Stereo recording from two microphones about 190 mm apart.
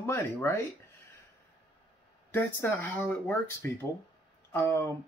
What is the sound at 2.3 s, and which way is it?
Speech, 10° left (ahead or behind).